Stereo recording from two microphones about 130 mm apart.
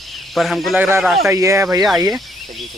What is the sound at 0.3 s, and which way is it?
Speech, centre (ahead or behind).